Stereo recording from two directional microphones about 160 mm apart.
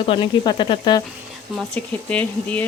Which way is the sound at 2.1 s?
10° left (ahead or behind).